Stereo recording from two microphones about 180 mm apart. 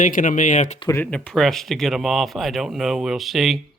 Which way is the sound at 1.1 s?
5° left (ahead or behind).